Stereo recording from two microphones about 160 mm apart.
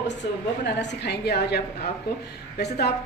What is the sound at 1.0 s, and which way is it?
A woman's voice, 90° left.